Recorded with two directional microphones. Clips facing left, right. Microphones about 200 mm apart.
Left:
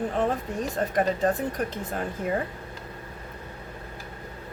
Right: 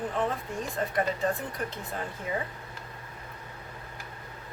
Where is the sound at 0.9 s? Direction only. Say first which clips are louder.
Left 5 dB; 45° left (ahead or behind).